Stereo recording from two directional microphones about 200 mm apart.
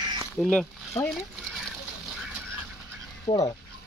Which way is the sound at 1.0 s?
15° left (ahead or behind).